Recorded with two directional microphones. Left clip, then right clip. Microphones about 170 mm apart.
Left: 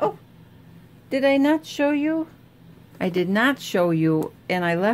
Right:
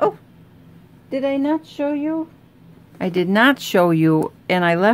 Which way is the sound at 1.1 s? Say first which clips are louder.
Left 1 dB; 10° left (ahead or behind).